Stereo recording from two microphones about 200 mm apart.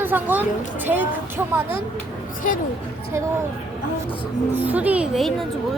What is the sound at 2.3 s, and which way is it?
Speech, 40° left (ahead or behind).